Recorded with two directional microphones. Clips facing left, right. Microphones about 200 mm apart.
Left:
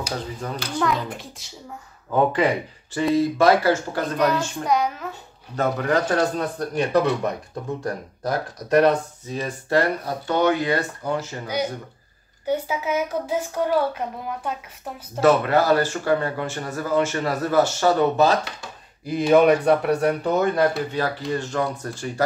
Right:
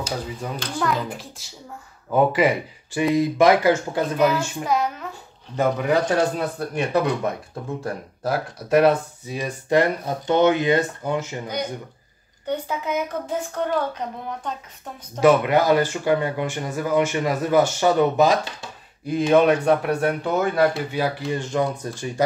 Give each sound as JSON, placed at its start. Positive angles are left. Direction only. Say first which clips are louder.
{"t": 0.4, "sound": "speech", "louder": "left 1 dB", "side_deg": -10}
{"t": 5.6, "sound": "speech", "louder": "right 1 dB", "side_deg": -10}
{"t": 11.4, "sound": "speech", "louder": "left 2 dB", "side_deg": 5}
{"t": 15.1, "sound": "speech", "louder": "right 1 dB", "side_deg": -15}
{"t": 19.0, "sound": "speech", "louder": "left 1 dB", "side_deg": 0}